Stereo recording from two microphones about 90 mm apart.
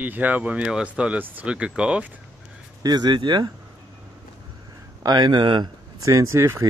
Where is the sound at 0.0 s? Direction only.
20° right (ahead or behind).